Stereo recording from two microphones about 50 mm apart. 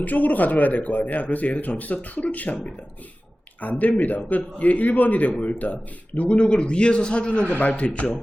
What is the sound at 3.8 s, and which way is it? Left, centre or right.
A man's voice, left.